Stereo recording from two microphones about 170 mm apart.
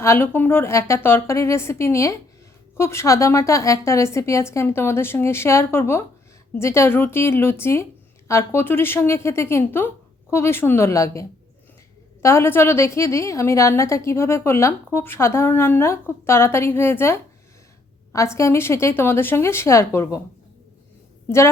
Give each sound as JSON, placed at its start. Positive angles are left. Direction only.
{"t": 0.0, "sound": "a woman's voice", "side_deg": 15}
{"t": 21.2, "sound": "a woman's voice", "side_deg": 15}